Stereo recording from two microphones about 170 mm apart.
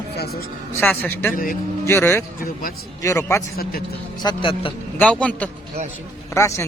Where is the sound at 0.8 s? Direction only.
10° left (ahead or behind).